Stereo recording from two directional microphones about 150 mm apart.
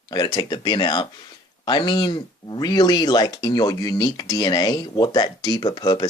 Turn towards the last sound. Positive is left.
turn(degrees=30)  # may be behind; listen again after turning